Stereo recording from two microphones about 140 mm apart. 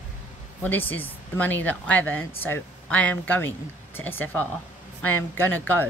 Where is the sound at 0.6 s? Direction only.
15° left (ahead or behind).